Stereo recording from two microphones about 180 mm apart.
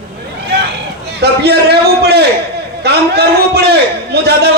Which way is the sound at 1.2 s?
65° right (ahead or behind).